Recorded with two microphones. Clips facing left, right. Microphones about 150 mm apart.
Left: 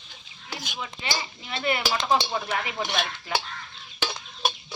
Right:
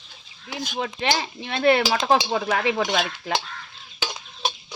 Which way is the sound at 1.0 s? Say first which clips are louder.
Right 7 dB; 85° right.